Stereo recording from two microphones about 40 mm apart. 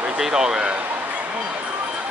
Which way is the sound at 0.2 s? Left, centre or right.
Centre.